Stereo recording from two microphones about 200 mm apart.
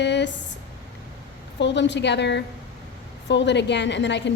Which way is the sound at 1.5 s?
60° left (ahead or behind).